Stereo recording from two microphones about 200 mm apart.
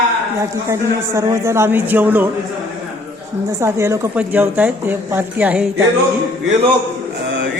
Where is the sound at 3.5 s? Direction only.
15° right (ahead or behind).